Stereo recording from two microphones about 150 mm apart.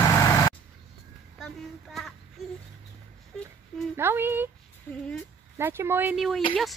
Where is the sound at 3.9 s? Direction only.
15° right (ahead or behind).